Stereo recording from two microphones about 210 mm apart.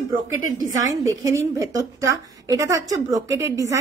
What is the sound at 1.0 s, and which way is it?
A woman's voice, 15° right (ahead or behind).